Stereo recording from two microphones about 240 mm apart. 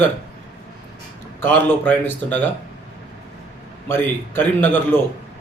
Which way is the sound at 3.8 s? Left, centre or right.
Centre.